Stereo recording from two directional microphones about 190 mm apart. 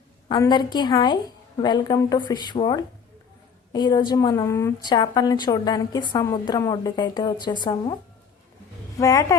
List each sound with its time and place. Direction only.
0.3 s a woman's voice: 20° left (ahead or behind)
9.0 s speech: 15° left (ahead or behind)